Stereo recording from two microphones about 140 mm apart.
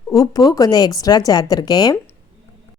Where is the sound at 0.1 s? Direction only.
25° left (ahead or behind).